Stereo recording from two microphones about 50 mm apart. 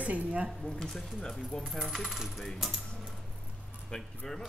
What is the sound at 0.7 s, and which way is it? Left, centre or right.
Speech, centre.